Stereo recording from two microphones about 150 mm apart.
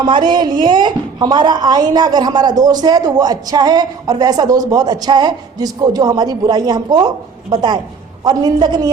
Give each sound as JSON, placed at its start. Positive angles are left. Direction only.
{"t": 0.0, "sound": "a woman's voice", "side_deg": -30}